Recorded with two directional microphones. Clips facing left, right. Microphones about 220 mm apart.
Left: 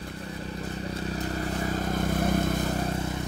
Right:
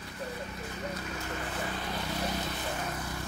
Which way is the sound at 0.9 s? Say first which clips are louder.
Left 6 dB; 35° left (ahead or behind).